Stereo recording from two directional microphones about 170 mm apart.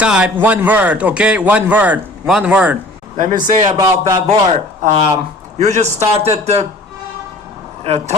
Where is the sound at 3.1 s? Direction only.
50° right (ahead or behind).